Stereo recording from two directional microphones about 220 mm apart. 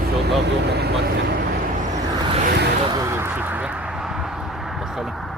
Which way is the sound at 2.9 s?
15° right (ahead or behind).